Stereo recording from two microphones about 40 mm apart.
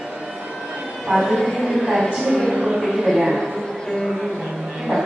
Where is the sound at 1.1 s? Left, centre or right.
Centre.